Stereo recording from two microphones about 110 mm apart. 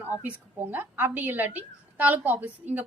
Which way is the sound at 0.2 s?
15° right (ahead or behind).